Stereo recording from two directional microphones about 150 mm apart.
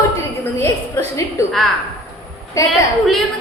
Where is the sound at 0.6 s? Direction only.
15° left (ahead or behind).